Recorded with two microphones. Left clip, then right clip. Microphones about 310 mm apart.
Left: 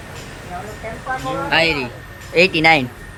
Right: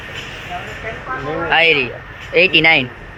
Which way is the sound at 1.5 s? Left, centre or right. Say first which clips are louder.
Right 4 dB; centre.